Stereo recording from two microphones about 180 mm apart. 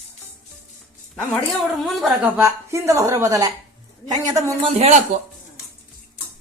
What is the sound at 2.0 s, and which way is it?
Speech, 10° right (ahead or behind).